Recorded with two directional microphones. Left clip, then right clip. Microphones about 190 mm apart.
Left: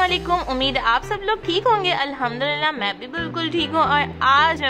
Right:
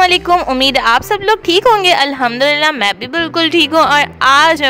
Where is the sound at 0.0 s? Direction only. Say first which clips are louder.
Right 9 dB; 55° right (ahead or behind).